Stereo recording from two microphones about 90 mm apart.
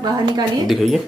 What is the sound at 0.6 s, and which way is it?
Speech, centre (ahead or behind).